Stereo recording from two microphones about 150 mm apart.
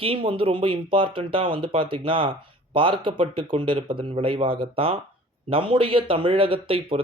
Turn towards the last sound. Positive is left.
turn(degrees=-40)  # may be behind; listen again after turning